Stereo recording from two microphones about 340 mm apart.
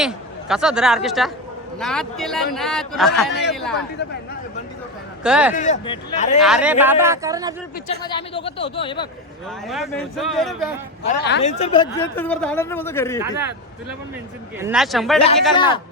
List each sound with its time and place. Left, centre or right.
0.0 s a man's voice: centre
5.2 s a man's voice: centre
5.5 s speech: left
6.4 s speech: centre
8.0 s a man's voice: centre
9.6 s a man's voice: centre
11.0 s speech: left
11.5 s a man's voice: centre
14.6 s a man's voice: centre
15.5 s a man's voice: centre